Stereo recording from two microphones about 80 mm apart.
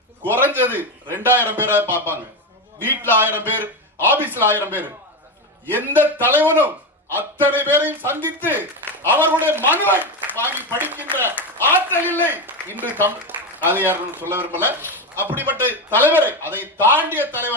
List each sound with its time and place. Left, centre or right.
0.3 s a man's voice: right
11.9 s a man's voice: left
12.2 s a man's voice: right